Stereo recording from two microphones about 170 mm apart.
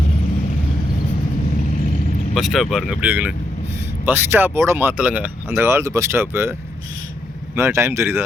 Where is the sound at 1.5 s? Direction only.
50° left (ahead or behind).